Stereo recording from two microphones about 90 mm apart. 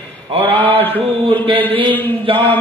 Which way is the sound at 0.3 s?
90° right.